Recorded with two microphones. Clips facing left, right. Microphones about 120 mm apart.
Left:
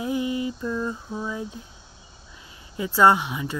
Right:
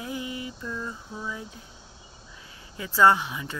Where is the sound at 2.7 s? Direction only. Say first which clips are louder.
Left 2 dB; 15° left (ahead or behind).